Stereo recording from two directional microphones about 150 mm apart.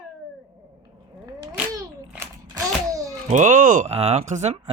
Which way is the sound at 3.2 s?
55° right (ahead or behind).